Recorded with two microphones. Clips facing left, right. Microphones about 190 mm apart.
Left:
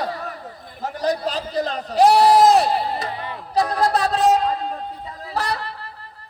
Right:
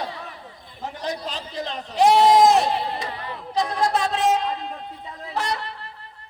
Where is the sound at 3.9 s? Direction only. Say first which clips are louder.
Left 5 dB; 35° left (ahead or behind).